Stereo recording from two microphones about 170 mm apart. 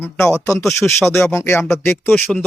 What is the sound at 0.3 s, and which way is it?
A man's voice, 20° left (ahead or behind).